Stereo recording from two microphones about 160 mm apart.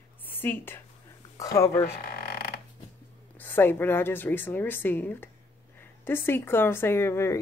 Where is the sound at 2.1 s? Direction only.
80° left.